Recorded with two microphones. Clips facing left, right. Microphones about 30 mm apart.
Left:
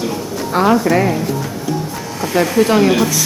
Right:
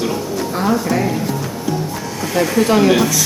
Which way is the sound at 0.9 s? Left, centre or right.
Centre.